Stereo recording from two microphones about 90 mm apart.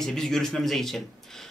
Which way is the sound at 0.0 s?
5° left (ahead or behind).